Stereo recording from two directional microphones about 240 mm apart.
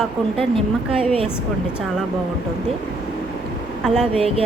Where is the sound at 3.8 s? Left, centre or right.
Centre.